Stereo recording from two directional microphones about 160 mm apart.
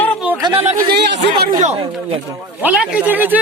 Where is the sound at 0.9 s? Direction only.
90° right.